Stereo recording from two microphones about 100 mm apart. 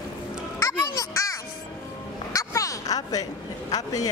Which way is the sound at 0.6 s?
35° left (ahead or behind).